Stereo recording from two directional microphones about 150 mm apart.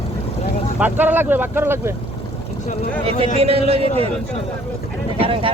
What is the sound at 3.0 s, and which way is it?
Speech, 40° right (ahead or behind).